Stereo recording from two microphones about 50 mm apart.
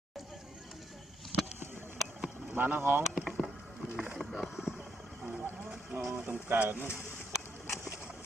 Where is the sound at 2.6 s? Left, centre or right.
Right.